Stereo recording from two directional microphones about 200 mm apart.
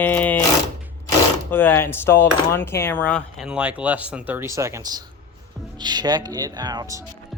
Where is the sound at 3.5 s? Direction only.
5° right (ahead or behind).